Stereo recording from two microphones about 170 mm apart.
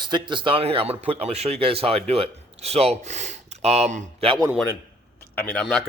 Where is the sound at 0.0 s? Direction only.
25° right (ahead or behind); by 4.3 s 45° right (ahead or behind).